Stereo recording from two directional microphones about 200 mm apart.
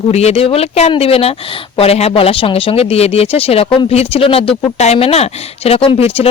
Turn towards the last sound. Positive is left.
turn(degrees=30)  # may be behind; listen again after turning